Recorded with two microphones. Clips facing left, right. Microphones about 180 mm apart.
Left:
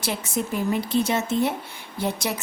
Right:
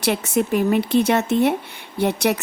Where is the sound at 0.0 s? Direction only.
65° right (ahead or behind).